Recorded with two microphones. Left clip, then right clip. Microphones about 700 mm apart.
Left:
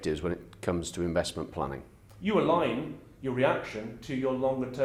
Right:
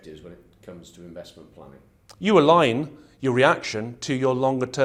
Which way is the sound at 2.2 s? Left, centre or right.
Right.